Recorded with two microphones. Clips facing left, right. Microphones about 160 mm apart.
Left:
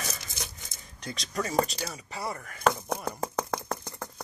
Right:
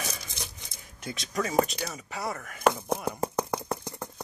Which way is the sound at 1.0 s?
Centre (ahead or behind).